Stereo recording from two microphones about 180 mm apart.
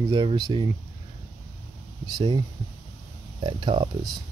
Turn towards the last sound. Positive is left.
turn(degrees=-25)  # may be behind; listen again after turning